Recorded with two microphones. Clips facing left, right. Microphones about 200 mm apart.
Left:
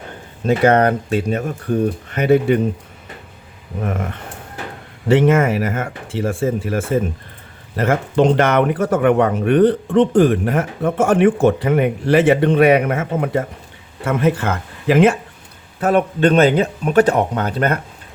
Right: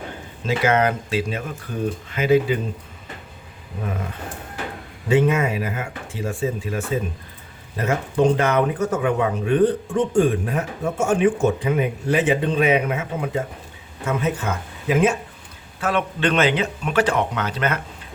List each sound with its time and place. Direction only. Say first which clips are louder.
0.4 s speech: left 6 dB; 60° left (ahead or behind)
3.8 s speech: left 5 dB; 60° left (ahead or behind)
5.0 s speech: left 5 dB; 85° left
6.1 s speech: left 6 dB; 75° left (ahead or behind)
7.8 s speech: left 4 dB; 80° left
12.9 s speech: left 6 dB; 55° left (ahead or behind); by 15.1 s 70° left (ahead or behind)
15.8 s speech: left 7 dB; 40° left (ahead or behind)